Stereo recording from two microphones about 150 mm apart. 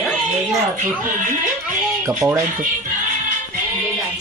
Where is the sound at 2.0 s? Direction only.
20° right (ahead or behind).